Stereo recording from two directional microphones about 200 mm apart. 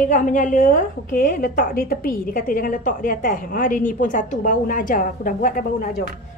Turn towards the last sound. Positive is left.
turn(degrees=45)  # may be behind; listen again after turning